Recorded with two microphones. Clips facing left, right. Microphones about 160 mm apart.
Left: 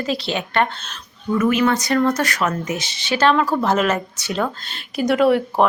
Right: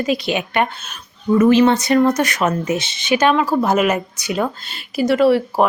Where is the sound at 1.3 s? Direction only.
30° right (ahead or behind).